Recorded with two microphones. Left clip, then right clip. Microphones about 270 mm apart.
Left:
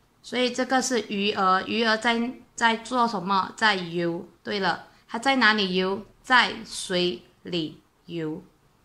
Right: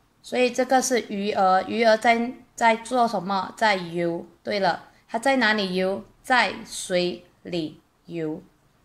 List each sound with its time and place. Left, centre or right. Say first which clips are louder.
0.2 s speech: right 3 dB; centre